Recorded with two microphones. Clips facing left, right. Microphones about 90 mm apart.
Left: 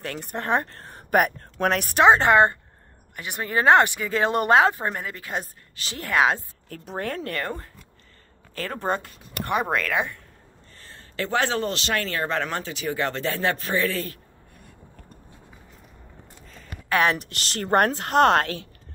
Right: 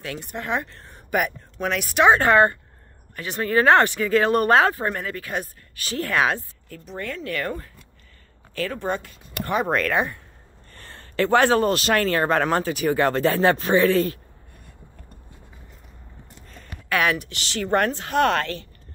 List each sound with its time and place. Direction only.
0.0 s speech: 45° left (ahead or behind)
2.0 s speech: 25° left (ahead or behind)
6.7 s speech: 60° left (ahead or behind)
8.5 s speech: 35° left (ahead or behind)
9.5 s speech: 10° left (ahead or behind)
10.7 s speech: 60° right (ahead or behind); by 14.1 s 35° right (ahead or behind)
16.9 s speech: 35° left (ahead or behind)
17.3 s speech: 50° left (ahead or behind)